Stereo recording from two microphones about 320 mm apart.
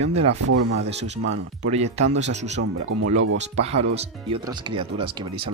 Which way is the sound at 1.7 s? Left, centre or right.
Centre.